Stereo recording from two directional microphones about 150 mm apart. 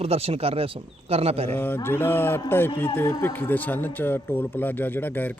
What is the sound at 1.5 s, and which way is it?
Speech, 15° left (ahead or behind).